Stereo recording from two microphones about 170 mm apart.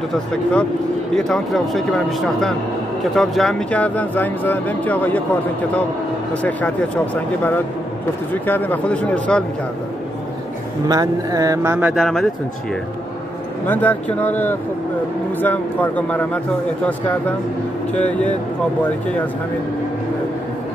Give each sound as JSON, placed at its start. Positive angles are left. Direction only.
{"t": 0.1, "sound": "speech", "side_deg": 5}
{"t": 7.2, "sound": "speech", "side_deg": 10}
{"t": 10.9, "sound": "speech", "side_deg": -20}
{"t": 11.9, "sound": "speech", "side_deg": 0}
{"t": 13.7, "sound": "speech", "side_deg": 10}
{"t": 17.9, "sound": "speech", "side_deg": 10}